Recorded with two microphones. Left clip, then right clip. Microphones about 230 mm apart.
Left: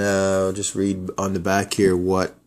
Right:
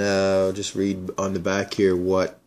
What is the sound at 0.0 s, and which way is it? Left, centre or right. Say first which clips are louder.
Speech: even; centre.